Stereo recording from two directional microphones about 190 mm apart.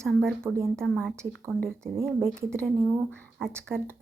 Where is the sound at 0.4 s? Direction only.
15° right (ahead or behind).